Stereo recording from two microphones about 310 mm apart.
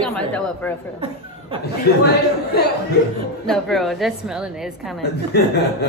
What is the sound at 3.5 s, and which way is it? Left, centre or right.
A woman's voice, centre.